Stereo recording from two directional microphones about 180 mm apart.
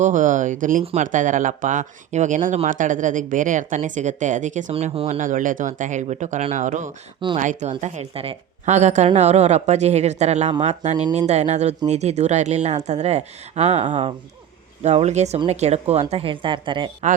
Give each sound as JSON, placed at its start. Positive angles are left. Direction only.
{"t": 0.0, "sound": "speech", "side_deg": -45}